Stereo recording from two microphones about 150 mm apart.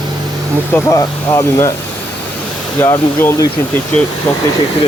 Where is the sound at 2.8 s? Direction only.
20° left (ahead or behind).